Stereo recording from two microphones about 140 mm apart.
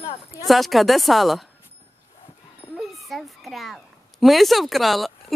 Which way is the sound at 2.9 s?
Centre (ahead or behind).